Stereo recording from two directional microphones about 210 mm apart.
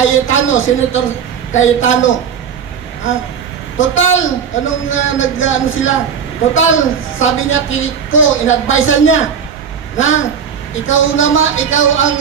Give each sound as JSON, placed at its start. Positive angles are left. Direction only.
{"t": 0.0, "sound": "a man's voice", "side_deg": 70}
{"t": 3.7, "sound": "a woman's voice", "side_deg": 70}